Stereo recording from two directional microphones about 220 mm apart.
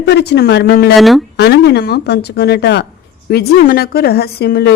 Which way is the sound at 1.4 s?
50° left (ahead or behind).